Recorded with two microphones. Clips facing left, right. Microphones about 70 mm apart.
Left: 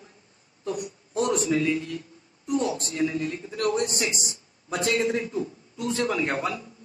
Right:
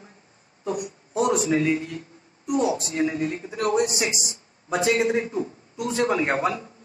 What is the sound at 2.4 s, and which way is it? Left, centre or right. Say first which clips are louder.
Speech: right 3 dB; centre.